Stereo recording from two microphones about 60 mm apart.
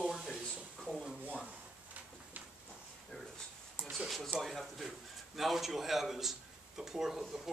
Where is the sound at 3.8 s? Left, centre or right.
Right.